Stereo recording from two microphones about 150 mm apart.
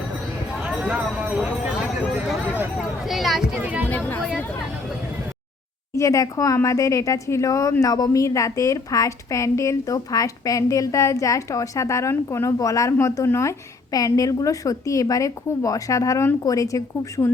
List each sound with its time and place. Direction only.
0.6 s a sound: 10° right (ahead or behind)
3.1 s speech: centre (ahead or behind)
3.8 s speech: 10° left (ahead or behind)
6.0 s a woman's voice: 20° left (ahead or behind)